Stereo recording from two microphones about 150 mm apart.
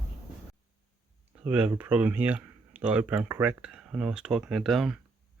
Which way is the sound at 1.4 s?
10° right (ahead or behind).